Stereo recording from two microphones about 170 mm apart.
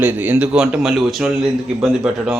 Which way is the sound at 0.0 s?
10° right (ahead or behind).